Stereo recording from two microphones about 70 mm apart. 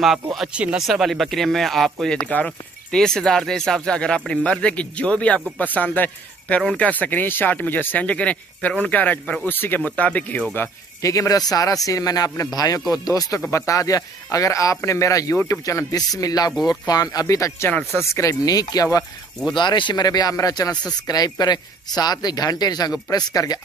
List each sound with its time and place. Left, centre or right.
0.0 s speech: centre
0.5 s speech: centre
0.7 s speech: centre
2.2 s speech: left
2.9 s speech: centre
11.0 s speech: left
13.5 s speech: left
20.3 s speech: left
21.1 s speech: left